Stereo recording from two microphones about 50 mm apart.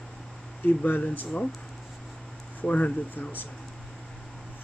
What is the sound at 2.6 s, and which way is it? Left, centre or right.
Speech, left.